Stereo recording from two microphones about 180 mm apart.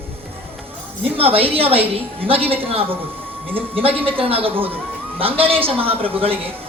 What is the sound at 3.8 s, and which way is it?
A man's voice, 30° right (ahead or behind).